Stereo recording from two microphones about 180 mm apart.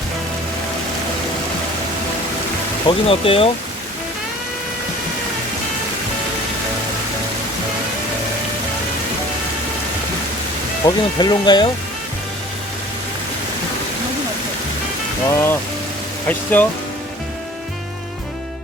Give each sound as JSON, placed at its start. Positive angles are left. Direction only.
{"t": 2.8, "sound": "speech", "side_deg": 30}
{"t": 10.8, "sound": "speech", "side_deg": 25}
{"t": 15.3, "sound": "speech", "side_deg": 15}
{"t": 16.5, "sound": "speech", "side_deg": 10}